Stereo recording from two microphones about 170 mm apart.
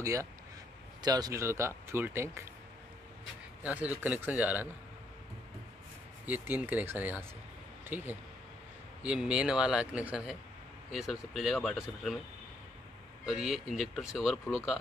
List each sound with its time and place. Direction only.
0.0 s speech: 20° right (ahead or behind)
3.6 s speech: 10° right (ahead or behind)
6.2 s speech: 10° right (ahead or behind)
13.2 s speech: centre (ahead or behind)